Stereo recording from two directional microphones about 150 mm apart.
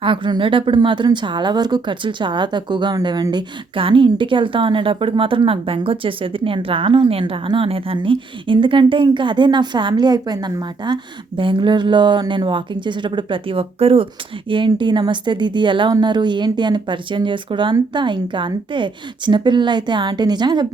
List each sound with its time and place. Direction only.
0.0 s a woman's voice: 35° right (ahead or behind)